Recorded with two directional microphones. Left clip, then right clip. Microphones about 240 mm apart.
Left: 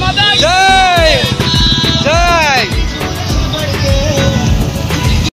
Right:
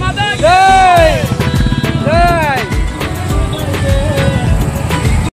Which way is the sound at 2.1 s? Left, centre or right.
Centre.